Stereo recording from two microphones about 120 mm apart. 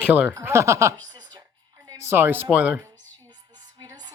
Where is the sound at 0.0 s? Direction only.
10° right (ahead or behind).